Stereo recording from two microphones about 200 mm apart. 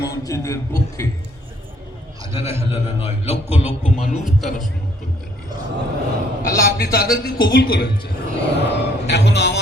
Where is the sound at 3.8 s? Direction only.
35° left (ahead or behind).